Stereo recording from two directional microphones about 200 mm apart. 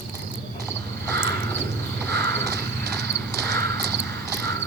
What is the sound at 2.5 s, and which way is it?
Clip-clop, 15° left (ahead or behind).